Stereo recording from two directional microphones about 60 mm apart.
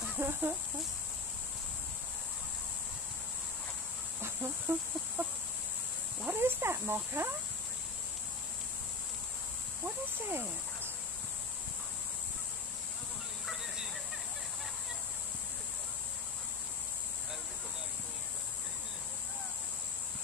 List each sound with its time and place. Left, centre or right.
0.2 s speech: right
4.2 s chicken: right
6.3 s snake: right
9.8 s cricket: right